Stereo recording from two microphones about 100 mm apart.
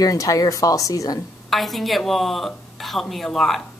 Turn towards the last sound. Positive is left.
turn(degrees=5)  # may be behind; listen again after turning